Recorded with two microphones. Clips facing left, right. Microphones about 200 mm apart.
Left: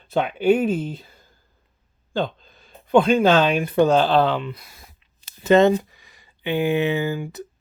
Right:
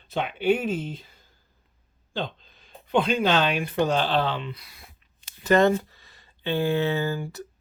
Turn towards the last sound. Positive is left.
turn(degrees=15)  # may be behind; listen again after turning